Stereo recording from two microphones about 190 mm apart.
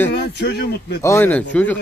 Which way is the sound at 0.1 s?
60° left (ahead or behind).